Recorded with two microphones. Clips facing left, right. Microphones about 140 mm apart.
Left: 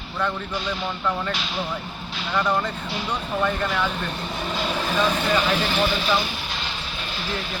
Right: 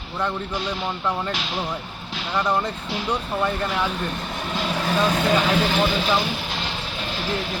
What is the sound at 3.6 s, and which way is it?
Speech, 25° right (ahead or behind).